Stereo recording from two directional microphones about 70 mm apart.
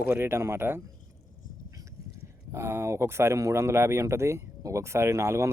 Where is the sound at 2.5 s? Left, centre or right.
Right.